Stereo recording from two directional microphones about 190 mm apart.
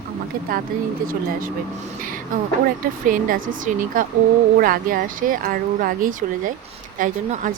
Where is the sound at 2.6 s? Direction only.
45° right (ahead or behind).